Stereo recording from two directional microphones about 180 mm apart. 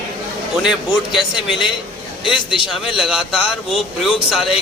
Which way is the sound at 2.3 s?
30° left (ahead or behind).